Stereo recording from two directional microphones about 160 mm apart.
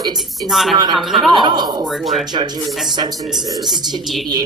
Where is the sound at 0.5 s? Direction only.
Centre (ahead or behind).